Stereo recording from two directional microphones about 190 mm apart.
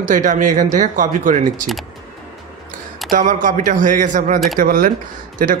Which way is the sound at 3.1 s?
45° right (ahead or behind).